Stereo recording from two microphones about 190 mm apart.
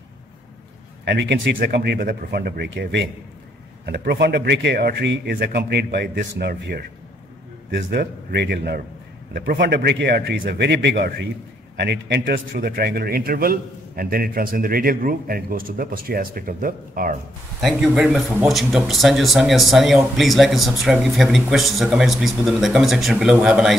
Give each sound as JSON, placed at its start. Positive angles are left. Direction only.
{"t": 1.0, "sound": "speech", "side_deg": -65}
{"t": 1.6, "sound": "a man's voice", "side_deg": -55}
{"t": 17.6, "sound": "speech", "side_deg": 0}